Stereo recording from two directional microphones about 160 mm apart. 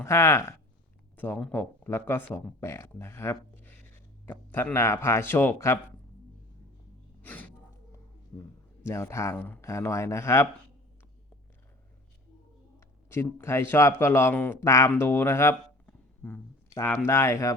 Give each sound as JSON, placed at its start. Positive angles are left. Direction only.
{"t": 0.0, "sound": "a man's voice", "side_deg": 20}
{"t": 7.2, "sound": "gasp", "side_deg": 10}
{"t": 8.3, "sound": "a man's voice", "side_deg": 15}
{"t": 13.1, "sound": "a man's voice", "side_deg": 15}